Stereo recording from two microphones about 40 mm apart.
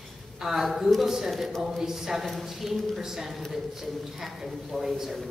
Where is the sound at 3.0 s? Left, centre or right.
Centre.